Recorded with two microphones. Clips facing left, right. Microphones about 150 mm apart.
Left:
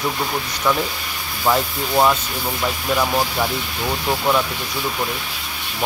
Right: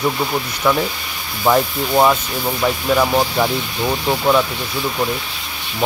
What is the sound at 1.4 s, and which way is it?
Speech, 15° right (ahead or behind).